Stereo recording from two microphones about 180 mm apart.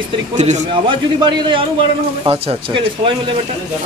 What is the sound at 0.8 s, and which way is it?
Speech, 25° right (ahead or behind).